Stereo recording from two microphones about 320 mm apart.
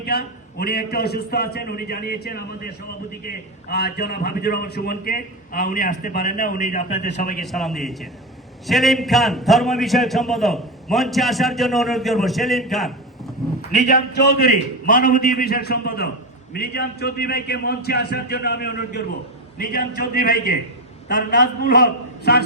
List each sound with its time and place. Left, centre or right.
0.0 s a man's voice: left
7.4 s a man's voice: centre
13.7 s a man's voice: left